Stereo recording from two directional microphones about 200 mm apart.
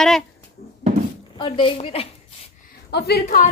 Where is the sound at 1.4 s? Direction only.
25° left (ahead or behind).